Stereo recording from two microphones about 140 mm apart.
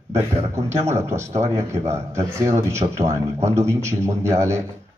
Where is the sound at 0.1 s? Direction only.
20° right (ahead or behind).